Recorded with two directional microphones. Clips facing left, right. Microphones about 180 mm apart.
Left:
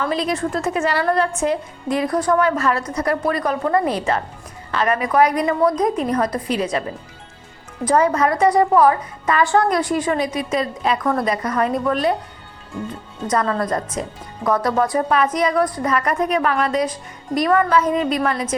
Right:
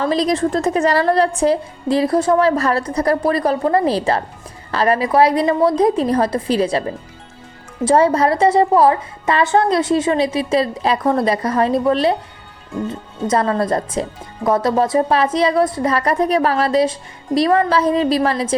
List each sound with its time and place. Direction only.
0.0 s a woman's voice: 35° right (ahead or behind)
7.9 s a woman's voice: 30° right (ahead or behind)
13.2 s a woman's voice: 30° right (ahead or behind)